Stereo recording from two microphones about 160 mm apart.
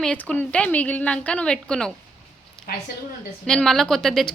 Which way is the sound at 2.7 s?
70° left (ahead or behind).